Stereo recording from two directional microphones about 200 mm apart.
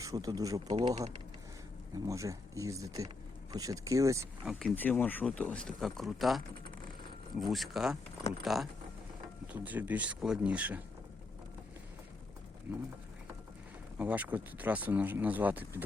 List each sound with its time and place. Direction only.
0.0 s speech: 15° right (ahead or behind)
2.0 s speech: 15° right (ahead or behind)
4.4 s speech: 5° left (ahead or behind)
9.5 s speech: 10° right (ahead or behind)
14.0 s speech: 10° right (ahead or behind)